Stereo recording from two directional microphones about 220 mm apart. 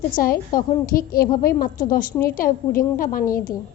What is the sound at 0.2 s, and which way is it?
A woman's voice, 40° left (ahead or behind).